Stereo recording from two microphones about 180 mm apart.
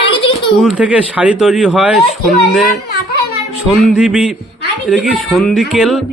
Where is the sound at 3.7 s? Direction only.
Centre (ahead or behind).